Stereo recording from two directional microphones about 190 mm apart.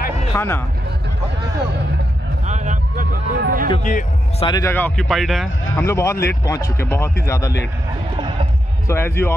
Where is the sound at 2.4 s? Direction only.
40° right (ahead or behind).